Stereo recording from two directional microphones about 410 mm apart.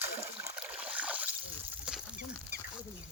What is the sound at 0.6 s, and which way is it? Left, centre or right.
Boat, centre.